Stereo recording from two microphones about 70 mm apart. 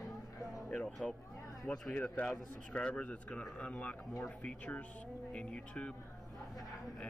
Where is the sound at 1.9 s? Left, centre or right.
Left.